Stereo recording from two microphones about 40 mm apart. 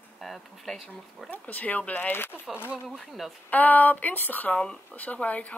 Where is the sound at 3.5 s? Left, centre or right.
Left.